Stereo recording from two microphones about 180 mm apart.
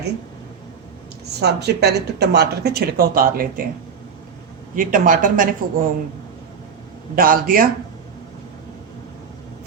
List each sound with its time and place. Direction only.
1.4 s speech: 65° right (ahead or behind)
4.7 s speech: 50° right (ahead or behind)
7.2 s speech: 50° right (ahead or behind)